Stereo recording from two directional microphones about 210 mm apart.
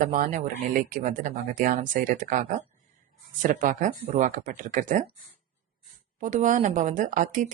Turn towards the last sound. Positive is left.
turn(degrees=-35)  # may be behind; listen again after turning